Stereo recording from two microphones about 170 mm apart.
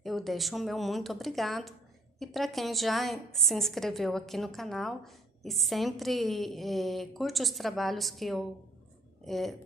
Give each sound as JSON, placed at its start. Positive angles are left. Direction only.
{"t": 0.0, "sound": "speech", "side_deg": 0}